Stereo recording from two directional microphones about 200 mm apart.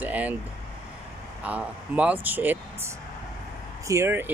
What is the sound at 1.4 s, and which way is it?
Speech, 5° right (ahead or behind).